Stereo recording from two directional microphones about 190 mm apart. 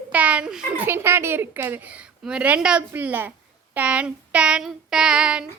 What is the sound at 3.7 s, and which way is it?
Child singing, 5° right (ahead or behind).